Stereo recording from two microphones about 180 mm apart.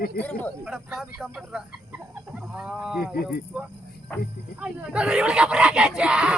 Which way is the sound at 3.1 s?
60° left (ahead or behind).